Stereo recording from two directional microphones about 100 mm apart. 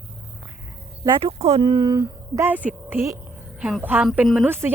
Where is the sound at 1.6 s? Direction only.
50° right (ahead or behind).